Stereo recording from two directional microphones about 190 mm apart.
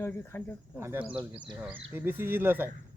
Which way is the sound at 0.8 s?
15° right (ahead or behind).